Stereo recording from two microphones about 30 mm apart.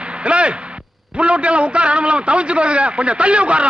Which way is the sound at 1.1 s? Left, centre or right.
Right.